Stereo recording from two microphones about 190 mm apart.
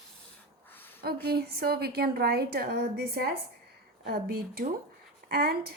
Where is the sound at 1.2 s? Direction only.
55° right (ahead or behind).